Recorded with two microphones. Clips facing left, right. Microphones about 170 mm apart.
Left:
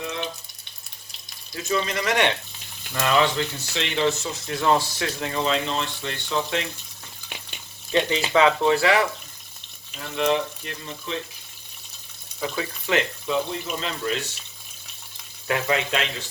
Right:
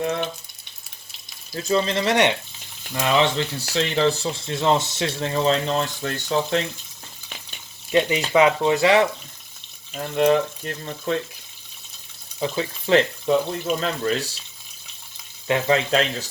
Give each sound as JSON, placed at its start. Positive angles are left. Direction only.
{"t": 0.0, "sound": "frying", "side_deg": -55}
{"t": 1.5, "sound": "speech", "side_deg": -30}
{"t": 3.3, "sound": "speech", "side_deg": -35}
{"t": 7.9, "sound": "speech", "side_deg": -15}
{"t": 9.9, "sound": "speech", "side_deg": -50}
{"t": 12.4, "sound": "speech", "side_deg": -30}
{"t": 15.4, "sound": "speech", "side_deg": -25}